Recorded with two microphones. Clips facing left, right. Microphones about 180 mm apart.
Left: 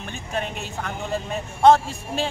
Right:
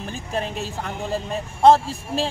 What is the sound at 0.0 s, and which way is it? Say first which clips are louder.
Speech: right 2 dB; 35° right (ahead or behind).